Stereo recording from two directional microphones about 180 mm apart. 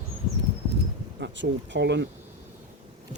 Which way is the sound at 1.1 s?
75° right (ahead or behind).